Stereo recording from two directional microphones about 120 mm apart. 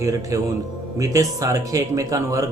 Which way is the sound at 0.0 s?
30° right (ahead or behind).